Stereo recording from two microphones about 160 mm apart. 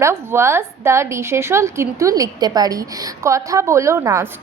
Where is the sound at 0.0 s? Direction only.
15° right (ahead or behind).